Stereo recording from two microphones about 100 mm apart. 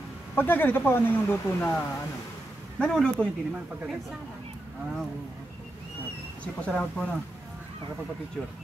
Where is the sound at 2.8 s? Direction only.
10° left (ahead or behind).